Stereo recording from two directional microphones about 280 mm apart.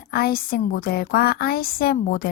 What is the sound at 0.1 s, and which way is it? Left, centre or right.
A woman's voice, left.